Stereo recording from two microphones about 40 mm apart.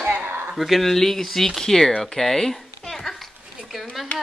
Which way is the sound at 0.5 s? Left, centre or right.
Centre.